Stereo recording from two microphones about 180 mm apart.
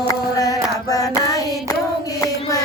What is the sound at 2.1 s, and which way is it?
Music, 20° left (ahead or behind).